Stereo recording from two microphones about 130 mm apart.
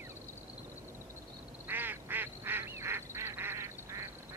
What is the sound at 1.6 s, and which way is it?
Honk, 15° right (ahead or behind).